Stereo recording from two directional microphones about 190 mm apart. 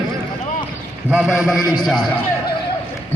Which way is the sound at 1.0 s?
5° right (ahead or behind).